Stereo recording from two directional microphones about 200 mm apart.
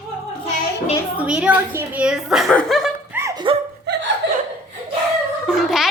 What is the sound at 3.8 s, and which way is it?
Chuckle, 55° right (ahead or behind).